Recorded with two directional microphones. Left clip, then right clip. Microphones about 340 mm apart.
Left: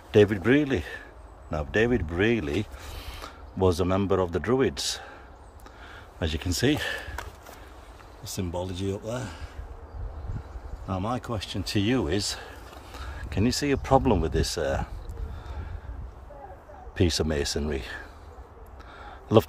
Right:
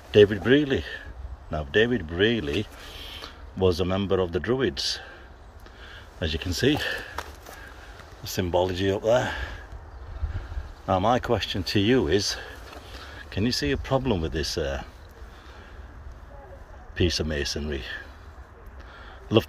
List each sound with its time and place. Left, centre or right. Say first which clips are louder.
0.1 s speech: right 3 dB; centre
6.1 s speech: right 1 dB; centre
8.2 s speech: right 9 dB; centre
10.9 s speech: right 9 dB; centre
16.9 s speech: even; centre
19.0 s a sound: left 2 dB; centre